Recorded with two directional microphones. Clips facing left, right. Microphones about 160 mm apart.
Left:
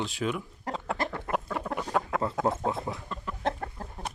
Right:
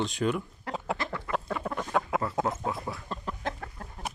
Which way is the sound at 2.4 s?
25° left (ahead or behind).